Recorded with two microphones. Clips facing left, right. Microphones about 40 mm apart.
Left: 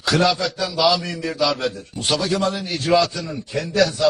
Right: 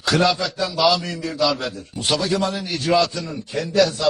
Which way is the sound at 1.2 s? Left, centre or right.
Centre.